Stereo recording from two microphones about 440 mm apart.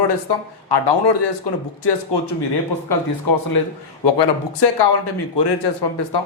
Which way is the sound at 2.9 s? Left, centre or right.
Left.